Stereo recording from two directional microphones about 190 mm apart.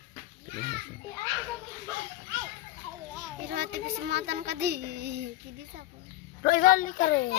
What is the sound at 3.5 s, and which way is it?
Child singing, 60° right (ahead or behind).